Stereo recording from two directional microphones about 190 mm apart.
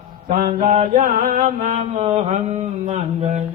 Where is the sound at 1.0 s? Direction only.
45° right (ahead or behind).